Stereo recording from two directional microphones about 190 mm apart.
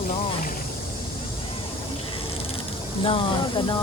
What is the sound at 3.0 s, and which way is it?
Speech, 25° left (ahead or behind).